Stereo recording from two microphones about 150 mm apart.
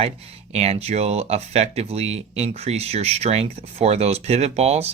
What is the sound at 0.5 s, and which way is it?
Speech, 45° right (ahead or behind).